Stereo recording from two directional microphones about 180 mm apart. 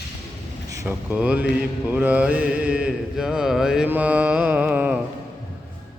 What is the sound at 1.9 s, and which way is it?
Mantra, 10° right (ahead or behind).